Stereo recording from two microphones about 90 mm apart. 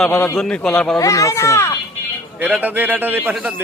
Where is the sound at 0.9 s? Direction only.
35° left (ahead or behind).